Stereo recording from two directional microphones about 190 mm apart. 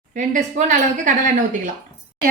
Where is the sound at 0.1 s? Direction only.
45° right (ahead or behind).